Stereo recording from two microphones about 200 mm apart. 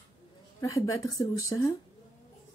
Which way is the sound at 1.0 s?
15° left (ahead or behind).